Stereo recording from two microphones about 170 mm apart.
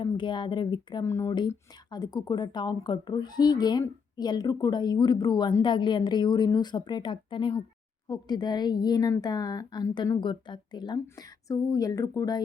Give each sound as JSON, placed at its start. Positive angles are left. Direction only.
{"t": 0.0, "sound": "speech", "side_deg": 25}